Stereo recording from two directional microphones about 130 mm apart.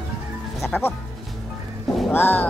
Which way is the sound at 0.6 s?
10° left (ahead or behind).